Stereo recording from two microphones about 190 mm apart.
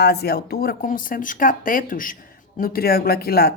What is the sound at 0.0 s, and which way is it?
Speech, 55° left (ahead or behind).